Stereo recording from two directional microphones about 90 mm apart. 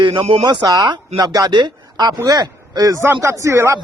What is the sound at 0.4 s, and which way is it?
Speech, 50° right (ahead or behind).